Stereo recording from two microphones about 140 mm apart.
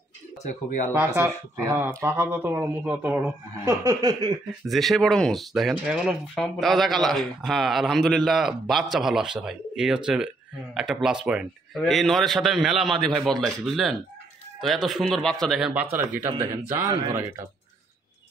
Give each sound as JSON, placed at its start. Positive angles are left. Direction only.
{"t": 0.4, "sound": "speech", "side_deg": 65}
{"t": 0.9, "sound": "speech", "side_deg": -15}
{"t": 3.6, "sound": "chuckle", "side_deg": -25}
{"t": 4.6, "sound": "speech", "side_deg": 0}